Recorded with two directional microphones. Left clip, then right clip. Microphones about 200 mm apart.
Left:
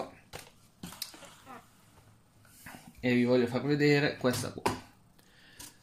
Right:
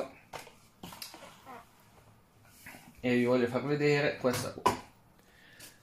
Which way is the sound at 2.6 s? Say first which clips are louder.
Left 1 dB; 30° left (ahead or behind).